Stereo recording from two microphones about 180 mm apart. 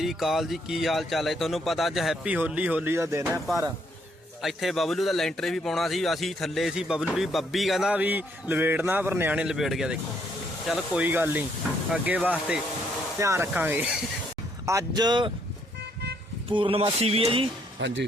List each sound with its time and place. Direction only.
0.0 s speech: centre (ahead or behind); by 3.4 s 15° right (ahead or behind)
4.4 s speech: centre (ahead or behind)
14.7 s speech: 20° right (ahead or behind)
16.5 s speech: 30° right (ahead or behind)
17.7 s speech: 85° right